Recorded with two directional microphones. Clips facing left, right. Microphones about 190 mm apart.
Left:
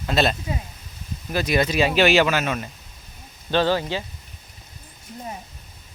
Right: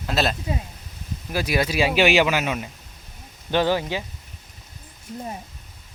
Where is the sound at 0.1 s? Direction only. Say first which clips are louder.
Left 2 dB; centre (ahead or behind).